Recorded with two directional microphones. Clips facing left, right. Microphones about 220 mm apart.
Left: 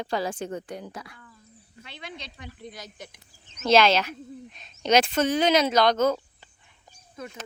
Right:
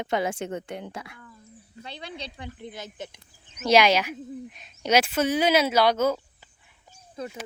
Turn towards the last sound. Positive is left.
turn(degrees=-30)  # may be behind; listen again after turning